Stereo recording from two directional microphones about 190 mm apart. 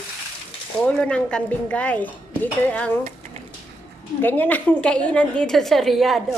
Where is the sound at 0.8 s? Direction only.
5° left (ahead or behind).